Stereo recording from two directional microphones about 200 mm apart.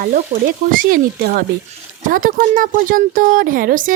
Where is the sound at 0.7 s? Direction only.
50° right (ahead or behind).